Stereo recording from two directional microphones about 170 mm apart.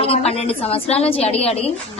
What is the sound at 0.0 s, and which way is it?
A woman's voice, 35° left (ahead or behind).